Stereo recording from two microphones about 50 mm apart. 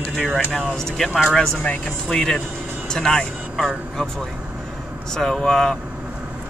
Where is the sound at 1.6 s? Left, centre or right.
Left.